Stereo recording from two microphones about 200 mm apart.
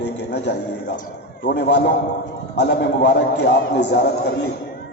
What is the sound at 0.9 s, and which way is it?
A man's voice, 40° left (ahead or behind).